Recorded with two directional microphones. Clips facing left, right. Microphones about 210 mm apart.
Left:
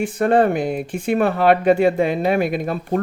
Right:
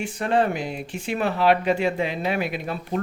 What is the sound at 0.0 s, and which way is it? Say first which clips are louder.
Speech: left 6 dB; 55° left (ahead or behind).